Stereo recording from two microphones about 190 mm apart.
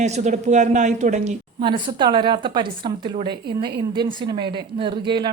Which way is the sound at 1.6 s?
25° right (ahead or behind).